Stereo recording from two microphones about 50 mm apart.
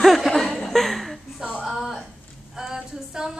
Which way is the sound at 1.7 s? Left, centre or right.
Centre.